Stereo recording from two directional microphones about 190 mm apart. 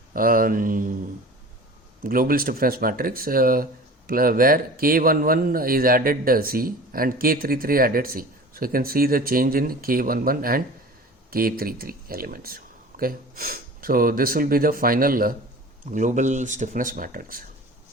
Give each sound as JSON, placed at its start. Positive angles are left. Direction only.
{"t": 0.1, "sound": "speech", "side_deg": -50}
{"t": 2.0, "sound": "speech", "side_deg": -50}